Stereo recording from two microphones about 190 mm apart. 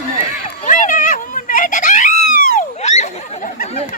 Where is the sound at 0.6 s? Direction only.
40° left (ahead or behind).